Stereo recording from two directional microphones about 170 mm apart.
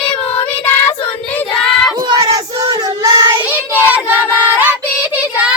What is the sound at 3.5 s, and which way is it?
Child singing, 10° right (ahead or behind).